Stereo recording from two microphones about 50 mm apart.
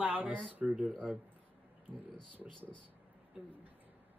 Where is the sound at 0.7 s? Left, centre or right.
Right.